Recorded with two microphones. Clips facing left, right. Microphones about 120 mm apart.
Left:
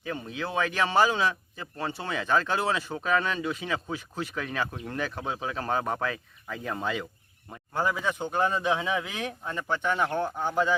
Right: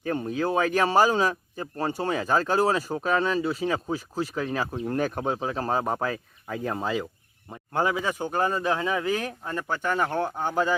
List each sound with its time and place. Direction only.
0.0 s speech: 45° right (ahead or behind)
4.9 s speech: 45° right (ahead or behind)
5.4 s speech: 35° right (ahead or behind)
7.9 s speech: 10° right (ahead or behind)
10.1 s speech: 15° right (ahead or behind)